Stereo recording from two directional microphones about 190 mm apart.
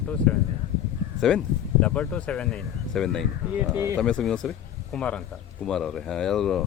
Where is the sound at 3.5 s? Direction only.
10° right (ahead or behind).